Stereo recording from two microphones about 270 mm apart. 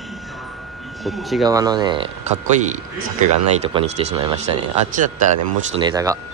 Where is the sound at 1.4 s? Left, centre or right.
Centre.